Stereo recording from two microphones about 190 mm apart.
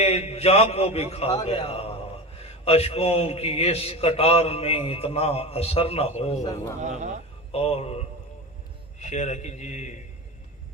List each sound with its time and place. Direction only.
0.0 s a man's voice: 35° left (ahead or behind)
6.8 s a man's voice: 40° right (ahead or behind)
7.5 s a man's voice: 30° left (ahead or behind)